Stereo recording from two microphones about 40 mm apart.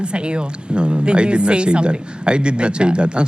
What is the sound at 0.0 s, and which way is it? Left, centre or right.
Speech, right.